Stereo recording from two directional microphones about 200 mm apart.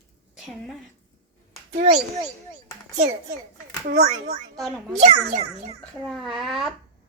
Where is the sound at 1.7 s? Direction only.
35° right (ahead or behind).